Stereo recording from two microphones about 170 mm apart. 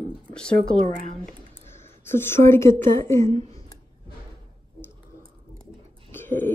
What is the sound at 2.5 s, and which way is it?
Speech, 15° left (ahead or behind).